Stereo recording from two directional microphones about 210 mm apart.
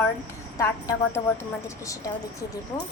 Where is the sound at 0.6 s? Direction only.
15° left (ahead or behind).